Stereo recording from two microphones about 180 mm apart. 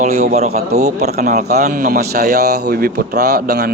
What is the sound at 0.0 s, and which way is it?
Speech, 40° right (ahead or behind).